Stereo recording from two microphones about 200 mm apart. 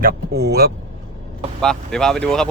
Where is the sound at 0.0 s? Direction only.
50° right (ahead or behind).